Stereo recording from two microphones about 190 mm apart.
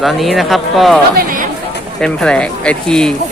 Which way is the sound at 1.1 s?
45° right (ahead or behind).